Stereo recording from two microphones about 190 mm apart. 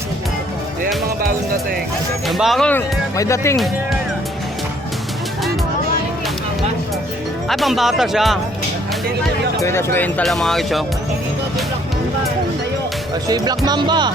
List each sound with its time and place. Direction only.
2.2 s speech: centre (ahead or behind); by 3.6 s 15° left (ahead or behind)
7.4 s speech: centre (ahead or behind)
9.6 s speech: 15° left (ahead or behind)
13.2 s speech: 20° right (ahead or behind)